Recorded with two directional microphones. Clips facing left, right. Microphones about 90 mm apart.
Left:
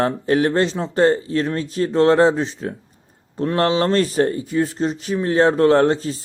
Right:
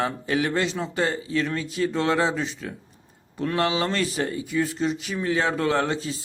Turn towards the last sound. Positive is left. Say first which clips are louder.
# left 9 dB
turn(degrees=40)  # may be behind; listen again after turning